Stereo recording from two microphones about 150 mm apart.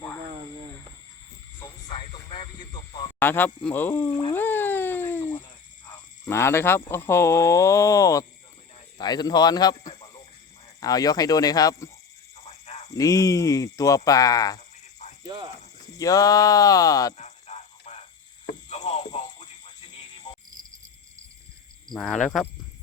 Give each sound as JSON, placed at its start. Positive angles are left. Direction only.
{"t": 1.9, "sound": "a sound", "side_deg": 35}
{"t": 3.2, "sound": "speech", "side_deg": 15}
{"t": 4.4, "sound": "cat", "side_deg": 15}
{"t": 6.2, "sound": "speech", "side_deg": 15}
{"t": 9.9, "sound": "a sound", "side_deg": 35}
{"t": 10.8, "sound": "speech", "side_deg": 25}
{"t": 12.4, "sound": "a sound", "side_deg": 45}
{"t": 12.9, "sound": "speech", "side_deg": 25}
{"t": 16.0, "sound": "speech", "side_deg": 25}
{"t": 17.2, "sound": "a sound", "side_deg": 50}
{"t": 18.7, "sound": "music", "side_deg": 50}
{"t": 21.8, "sound": "speech", "side_deg": 5}